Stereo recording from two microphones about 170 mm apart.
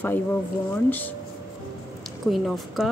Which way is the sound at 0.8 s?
10° left (ahead or behind).